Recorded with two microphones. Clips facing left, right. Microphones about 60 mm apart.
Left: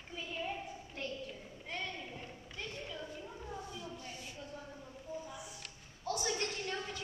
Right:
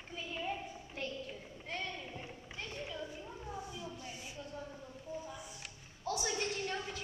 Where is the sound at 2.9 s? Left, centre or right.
Centre.